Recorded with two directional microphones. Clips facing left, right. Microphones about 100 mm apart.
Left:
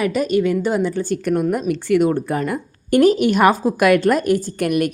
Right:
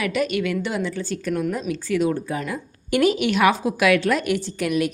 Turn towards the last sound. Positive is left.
turn(degrees=55)  # may be behind; listen again after turning